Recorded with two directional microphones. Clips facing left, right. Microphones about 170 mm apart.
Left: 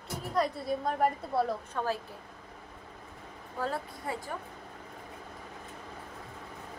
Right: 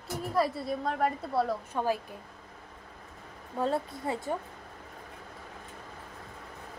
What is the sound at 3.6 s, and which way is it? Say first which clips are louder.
Speech: right 5 dB; 25° right (ahead or behind).